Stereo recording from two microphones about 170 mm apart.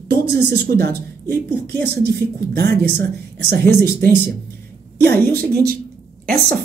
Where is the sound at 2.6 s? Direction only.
85° right.